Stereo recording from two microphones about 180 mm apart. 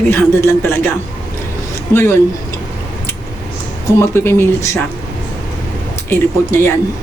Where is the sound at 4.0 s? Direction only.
15° left (ahead or behind).